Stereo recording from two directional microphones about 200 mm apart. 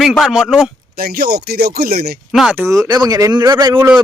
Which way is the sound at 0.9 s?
50° right (ahead or behind).